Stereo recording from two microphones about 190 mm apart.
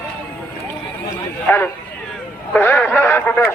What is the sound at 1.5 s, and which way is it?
Speech, 10° left (ahead or behind).